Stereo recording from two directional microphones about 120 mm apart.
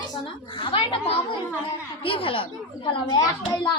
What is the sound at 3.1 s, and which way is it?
Speech, 35° left (ahead or behind).